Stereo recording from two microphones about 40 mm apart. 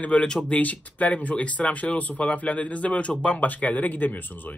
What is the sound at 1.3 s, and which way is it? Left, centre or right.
Speech, left.